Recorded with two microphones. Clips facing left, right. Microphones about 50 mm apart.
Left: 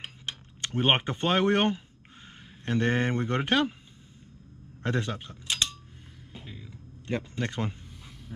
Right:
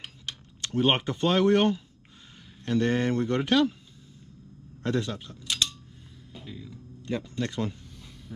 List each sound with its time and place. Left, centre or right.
0.0 s a sound: left
2.6 s speech: left
4.8 s speech: left
7.1 s speech: left